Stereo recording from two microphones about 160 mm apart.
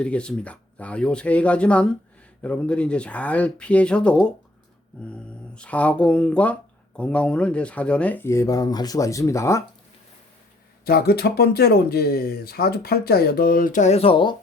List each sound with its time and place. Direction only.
0.0 s speech: 5° left (ahead or behind)
5.5 s speech: 10° left (ahead or behind)
10.8 s speech: 75° left (ahead or behind); by 14.3 s 35° left (ahead or behind)